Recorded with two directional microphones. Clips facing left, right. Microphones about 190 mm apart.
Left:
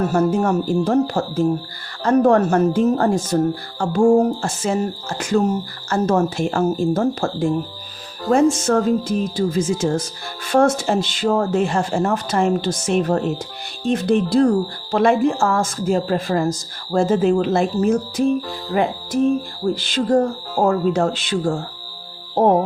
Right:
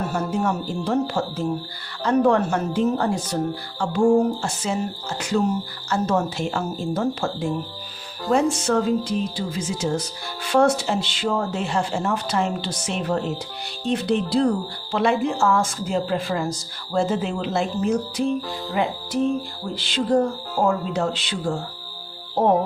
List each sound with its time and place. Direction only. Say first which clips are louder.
0.1 s speech: left 6 dB; 50° left (ahead or behind)